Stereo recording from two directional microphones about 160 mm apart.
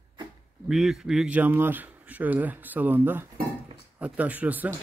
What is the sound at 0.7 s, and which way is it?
A man's voice, centre (ahead or behind).